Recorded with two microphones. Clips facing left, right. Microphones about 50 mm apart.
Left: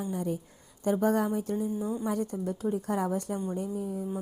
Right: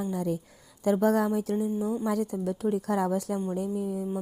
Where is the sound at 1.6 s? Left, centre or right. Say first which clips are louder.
Right 3 dB; right.